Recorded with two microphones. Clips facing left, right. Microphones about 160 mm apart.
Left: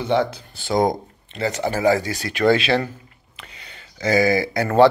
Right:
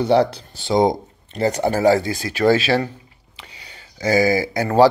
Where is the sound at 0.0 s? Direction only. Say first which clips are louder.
Right 4 dB; 35° right (ahead or behind).